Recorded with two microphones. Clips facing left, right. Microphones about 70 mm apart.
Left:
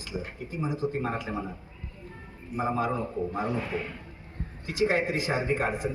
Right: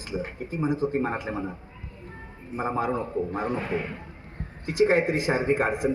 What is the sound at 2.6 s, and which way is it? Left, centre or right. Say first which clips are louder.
Speech: right 1 dB; right.